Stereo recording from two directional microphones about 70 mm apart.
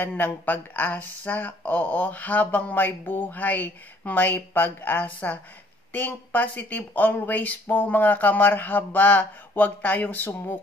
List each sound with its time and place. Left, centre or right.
0.2 s speech: left